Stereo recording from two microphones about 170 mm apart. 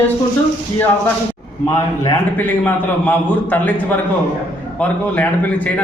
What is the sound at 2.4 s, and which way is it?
A man's voice, 10° left (ahead or behind).